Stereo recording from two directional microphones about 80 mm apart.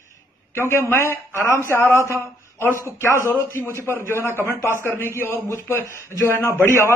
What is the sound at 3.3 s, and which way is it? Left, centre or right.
A man's voice, left.